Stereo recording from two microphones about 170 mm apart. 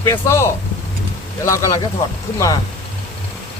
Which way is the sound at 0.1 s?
15° left (ahead or behind).